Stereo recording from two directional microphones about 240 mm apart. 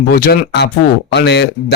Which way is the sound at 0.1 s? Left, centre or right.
Left.